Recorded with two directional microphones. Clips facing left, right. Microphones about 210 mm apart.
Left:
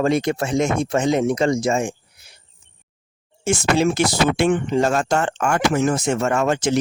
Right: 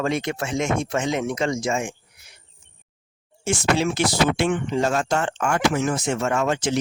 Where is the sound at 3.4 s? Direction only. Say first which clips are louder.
Left 3 dB; 45° left (ahead or behind).